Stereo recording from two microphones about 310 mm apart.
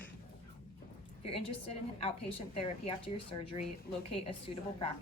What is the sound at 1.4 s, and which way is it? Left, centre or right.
Speech, centre.